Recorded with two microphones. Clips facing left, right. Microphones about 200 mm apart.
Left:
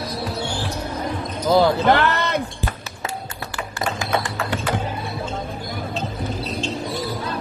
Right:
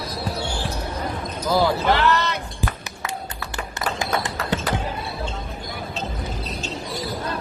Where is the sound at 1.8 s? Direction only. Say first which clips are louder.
Left 2 dB; 55° left (ahead or behind).